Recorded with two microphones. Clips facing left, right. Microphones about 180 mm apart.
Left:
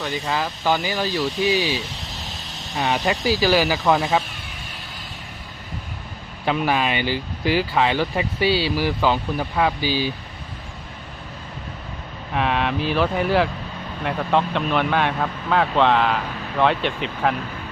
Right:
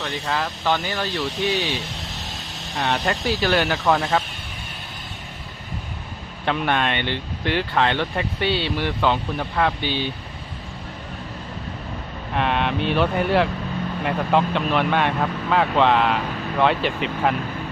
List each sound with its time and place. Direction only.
0.0 s speech: 5° left (ahead or behind)
6.4 s speech: 5° left (ahead or behind)
12.3 s speech: centre (ahead or behind)